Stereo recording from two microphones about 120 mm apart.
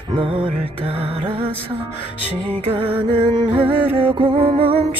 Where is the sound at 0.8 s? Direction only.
55° right (ahead or behind).